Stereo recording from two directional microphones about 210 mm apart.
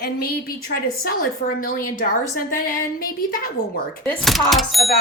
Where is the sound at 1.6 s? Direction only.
40° left (ahead or behind).